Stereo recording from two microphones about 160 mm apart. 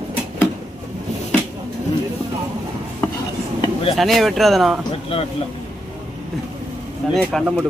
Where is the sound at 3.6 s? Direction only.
35° left (ahead or behind).